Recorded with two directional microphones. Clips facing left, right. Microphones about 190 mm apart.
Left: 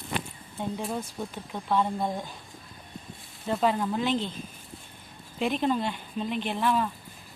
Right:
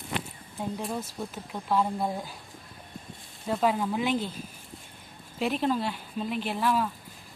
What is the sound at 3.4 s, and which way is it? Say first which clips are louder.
Speech: even; 5° right (ahead or behind).